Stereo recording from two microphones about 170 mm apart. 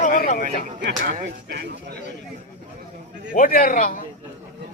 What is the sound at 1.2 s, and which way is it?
Speech, 85° right.